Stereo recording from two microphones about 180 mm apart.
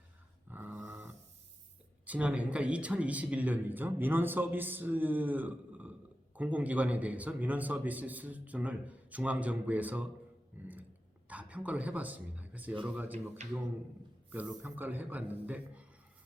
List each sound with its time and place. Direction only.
0.5 s dog: 10° right (ahead or behind)
2.0 s speech: 10° right (ahead or behind)
10.5 s a sound: 10° right (ahead or behind)
11.3 s a man's voice: 10° right (ahead or behind)
13.4 s a man's voice: 40° right (ahead or behind)
14.3 s speech: 10° right (ahead or behind)